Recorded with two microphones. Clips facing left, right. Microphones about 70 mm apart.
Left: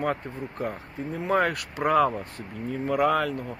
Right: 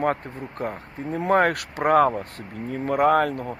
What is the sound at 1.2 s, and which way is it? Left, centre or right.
Speech, right.